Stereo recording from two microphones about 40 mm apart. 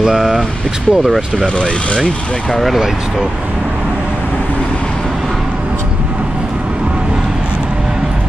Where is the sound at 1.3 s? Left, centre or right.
Left.